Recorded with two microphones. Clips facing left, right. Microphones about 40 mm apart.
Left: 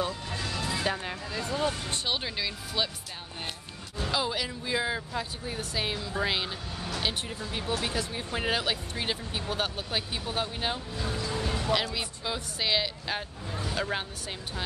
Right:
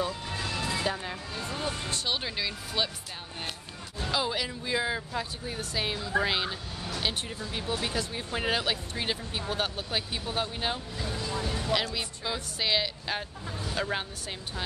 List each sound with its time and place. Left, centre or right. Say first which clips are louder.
0.4 s vehicle: right 1 dB; centre
0.8 s speech: left 1 dB; centre
1.3 s music: left 6 dB; left
2.0 s speech: even; centre
4.1 s speech: even; centre
11.4 s music: left 2 dB; left
11.7 s speech: even; centre